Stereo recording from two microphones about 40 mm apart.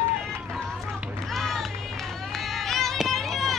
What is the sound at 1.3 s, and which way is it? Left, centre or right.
Run, centre.